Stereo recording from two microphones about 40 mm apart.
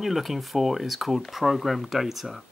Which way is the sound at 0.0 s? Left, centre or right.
Centre.